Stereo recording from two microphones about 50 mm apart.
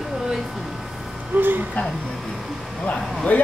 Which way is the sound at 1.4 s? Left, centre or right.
Right.